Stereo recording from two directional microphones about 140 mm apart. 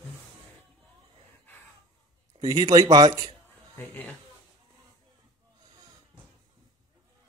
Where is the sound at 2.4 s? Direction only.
30° right (ahead or behind).